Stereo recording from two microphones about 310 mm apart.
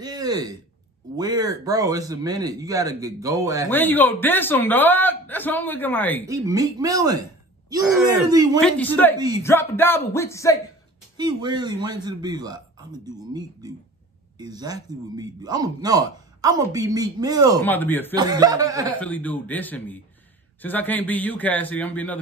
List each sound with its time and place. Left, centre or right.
0.0 s speech: centre
3.7 s a man's voice: centre
6.2 s a man's voice: centre
11.1 s speech: centre
17.6 s a man's voice: centre
18.1 s speech: centre
18.9 s a man's voice: centre